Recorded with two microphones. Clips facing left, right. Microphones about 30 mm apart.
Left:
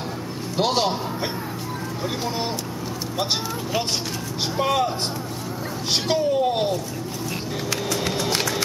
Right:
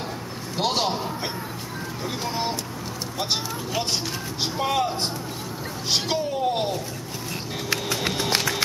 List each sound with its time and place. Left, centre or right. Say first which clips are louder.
0.6 s a man's voice: left 2 dB; centre
4.6 s a man's voice: left 2 dB; centre
7.7 s a sound: even; centre